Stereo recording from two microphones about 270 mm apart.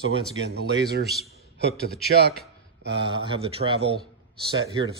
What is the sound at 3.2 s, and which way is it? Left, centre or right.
Speech, right.